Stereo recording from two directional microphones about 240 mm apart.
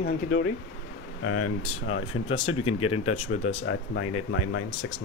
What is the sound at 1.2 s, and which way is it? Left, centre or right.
Speech, left.